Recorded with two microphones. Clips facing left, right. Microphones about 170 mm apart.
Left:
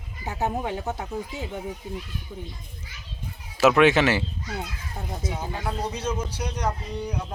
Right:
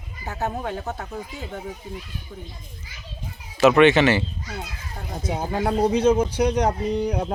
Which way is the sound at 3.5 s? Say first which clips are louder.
Right 3 dB; 5° left (ahead or behind).